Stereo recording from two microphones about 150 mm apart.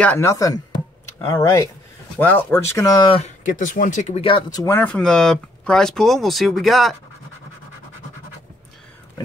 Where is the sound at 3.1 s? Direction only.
55° left (ahead or behind).